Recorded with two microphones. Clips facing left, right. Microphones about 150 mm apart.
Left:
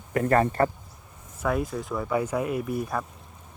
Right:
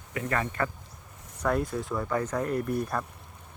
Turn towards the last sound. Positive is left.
turn(degrees=5)  # may be behind; listen again after turning